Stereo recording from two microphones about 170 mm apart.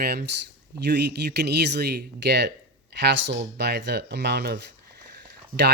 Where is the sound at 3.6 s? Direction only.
80° right.